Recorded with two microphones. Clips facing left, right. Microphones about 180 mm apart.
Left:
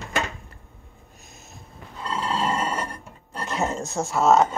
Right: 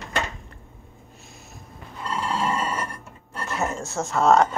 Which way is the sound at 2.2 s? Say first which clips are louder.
Left 1 dB; 25° left (ahead or behind).